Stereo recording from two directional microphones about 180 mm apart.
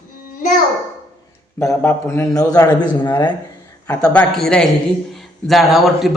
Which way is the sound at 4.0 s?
5° left (ahead or behind).